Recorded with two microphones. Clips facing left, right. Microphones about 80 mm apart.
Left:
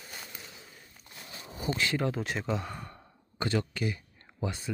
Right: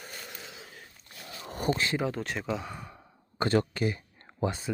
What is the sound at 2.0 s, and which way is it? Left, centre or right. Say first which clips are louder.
Speech: even; centre.